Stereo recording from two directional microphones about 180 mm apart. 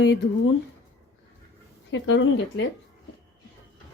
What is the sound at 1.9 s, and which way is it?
Speech, 90° left.